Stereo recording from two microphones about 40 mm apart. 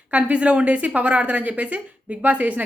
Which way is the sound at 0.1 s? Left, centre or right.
Right.